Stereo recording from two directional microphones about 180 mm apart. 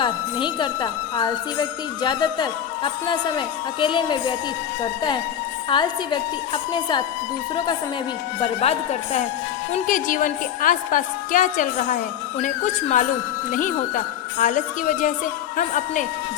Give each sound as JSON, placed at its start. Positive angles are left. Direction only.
{"t": 0.0, "sound": "speech", "side_deg": 25}
{"t": 8.4, "sound": "speech", "side_deg": 35}
{"t": 9.7, "sound": "a woman's voice", "side_deg": 50}